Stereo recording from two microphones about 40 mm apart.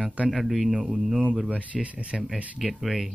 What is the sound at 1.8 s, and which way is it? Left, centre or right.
Speech, right.